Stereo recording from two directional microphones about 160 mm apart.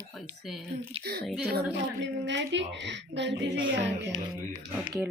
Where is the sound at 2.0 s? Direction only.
90° right.